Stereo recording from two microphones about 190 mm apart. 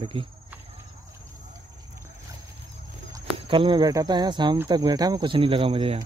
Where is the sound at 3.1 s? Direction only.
25° right (ahead or behind).